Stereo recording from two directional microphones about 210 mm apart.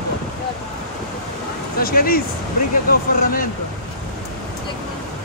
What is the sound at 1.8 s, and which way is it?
Speech, 45° left (ahead or behind).